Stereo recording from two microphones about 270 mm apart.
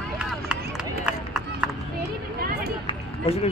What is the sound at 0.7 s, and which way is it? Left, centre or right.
Run, centre.